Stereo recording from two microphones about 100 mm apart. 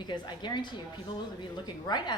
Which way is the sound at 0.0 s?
50° left (ahead or behind).